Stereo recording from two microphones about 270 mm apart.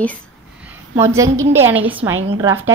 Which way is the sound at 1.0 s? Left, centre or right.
Centre.